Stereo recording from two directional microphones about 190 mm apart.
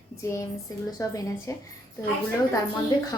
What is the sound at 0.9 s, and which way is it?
Speech, 15° left (ahead or behind).